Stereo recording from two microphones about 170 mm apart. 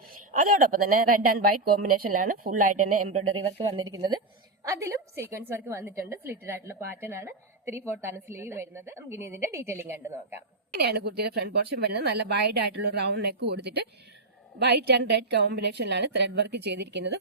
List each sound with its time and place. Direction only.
0.3 s a woman's voice: 50° right (ahead or behind)
3.3 s a woman's voice: 30° right (ahead or behind)
10.8 s a woman's voice: 70° right (ahead or behind); by 17.2 s 90° right